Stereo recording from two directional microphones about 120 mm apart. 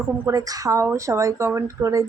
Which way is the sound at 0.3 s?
30° right (ahead or behind).